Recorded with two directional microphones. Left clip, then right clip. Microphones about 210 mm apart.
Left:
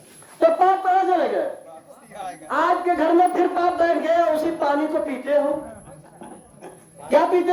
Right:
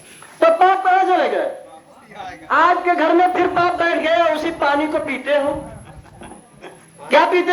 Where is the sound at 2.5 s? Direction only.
20° left (ahead or behind).